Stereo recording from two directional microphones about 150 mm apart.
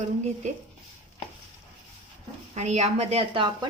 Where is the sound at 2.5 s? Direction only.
50° right (ahead or behind); by 3.7 s 35° right (ahead or behind).